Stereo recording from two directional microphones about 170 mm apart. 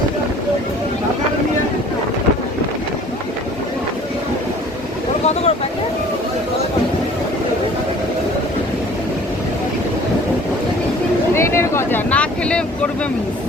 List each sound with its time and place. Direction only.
5.2 s vehicle: 40° left (ahead or behind)
11.3 s vehicle: 15° left (ahead or behind)